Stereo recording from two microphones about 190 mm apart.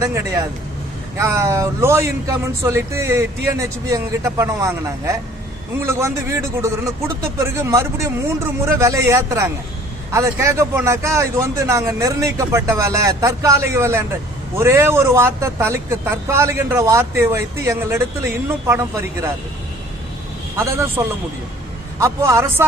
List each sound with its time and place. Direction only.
0.0 s a man's voice: 15° right (ahead or behind)
21.0 s a man's voice: 15° right (ahead or behind)